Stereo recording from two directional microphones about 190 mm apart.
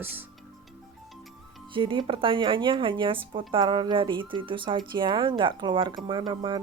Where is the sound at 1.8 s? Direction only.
25° right (ahead or behind).